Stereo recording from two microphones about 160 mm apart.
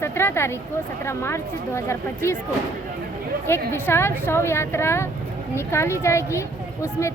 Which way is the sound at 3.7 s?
15° left (ahead or behind).